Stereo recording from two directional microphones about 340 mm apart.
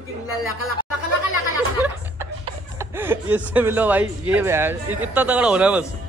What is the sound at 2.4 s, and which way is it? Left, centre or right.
Snicker, centre.